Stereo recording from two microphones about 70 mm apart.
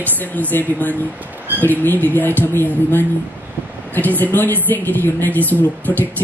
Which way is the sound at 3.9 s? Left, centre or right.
Left.